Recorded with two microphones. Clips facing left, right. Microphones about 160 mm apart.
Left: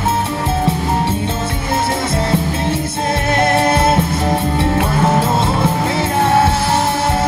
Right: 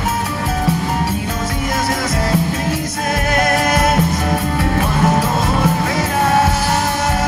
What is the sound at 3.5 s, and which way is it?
Music, 30° left (ahead or behind).